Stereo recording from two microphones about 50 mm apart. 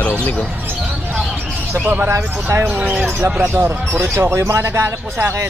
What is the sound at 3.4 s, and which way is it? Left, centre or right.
Speech, right.